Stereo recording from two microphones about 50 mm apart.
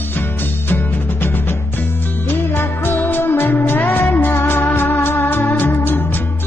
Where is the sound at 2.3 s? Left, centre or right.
Left.